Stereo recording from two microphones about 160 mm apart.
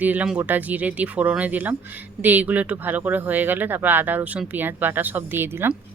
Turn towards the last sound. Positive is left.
turn(degrees=-15)  # may be behind; listen again after turning